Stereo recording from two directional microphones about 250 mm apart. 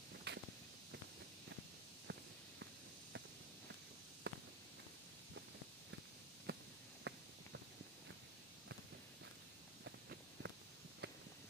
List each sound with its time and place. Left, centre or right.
0.3 s walk: right
2.1 s walk: right
4.2 s walk: right
6.5 s a sound: right
7.1 s clip-clop: right
9.8 s walk: right
11.0 s a sound: right